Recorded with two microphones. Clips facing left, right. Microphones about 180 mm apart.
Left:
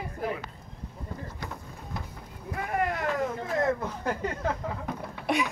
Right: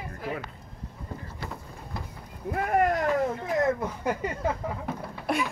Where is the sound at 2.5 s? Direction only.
55° right (ahead or behind).